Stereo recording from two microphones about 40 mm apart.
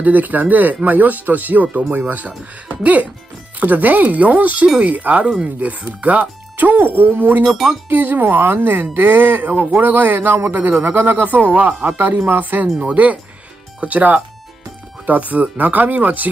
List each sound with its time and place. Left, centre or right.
0.0 s speech: right
6.5 s speech: right
11.2 s speech: right
12.8 s speech: right